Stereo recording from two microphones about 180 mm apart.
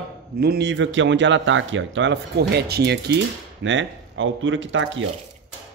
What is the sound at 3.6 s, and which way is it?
Speech, 90° right.